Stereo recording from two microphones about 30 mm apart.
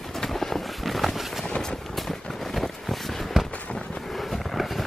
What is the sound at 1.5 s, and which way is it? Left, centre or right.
Vehicle, left.